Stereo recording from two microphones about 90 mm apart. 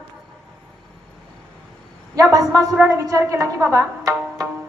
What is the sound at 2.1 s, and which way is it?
A woman's voice, 40° right (ahead or behind).